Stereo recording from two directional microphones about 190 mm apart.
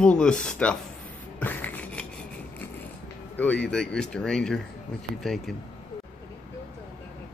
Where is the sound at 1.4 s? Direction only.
10° left (ahead or behind).